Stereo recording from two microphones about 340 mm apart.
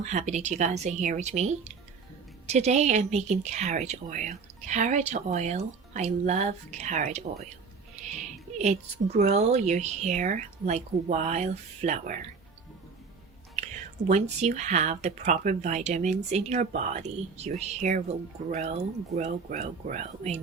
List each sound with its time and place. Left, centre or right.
0.0 s a woman's voice: centre
8.5 s a woman's voice: centre
14.1 s a woman's voice: right